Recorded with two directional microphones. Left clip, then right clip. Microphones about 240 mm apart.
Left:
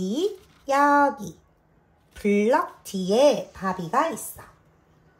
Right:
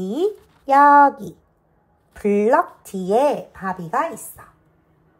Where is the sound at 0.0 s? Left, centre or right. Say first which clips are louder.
Right 4 dB; right.